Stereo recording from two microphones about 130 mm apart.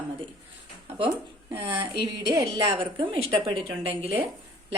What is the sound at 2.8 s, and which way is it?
Speech, 40° right (ahead or behind).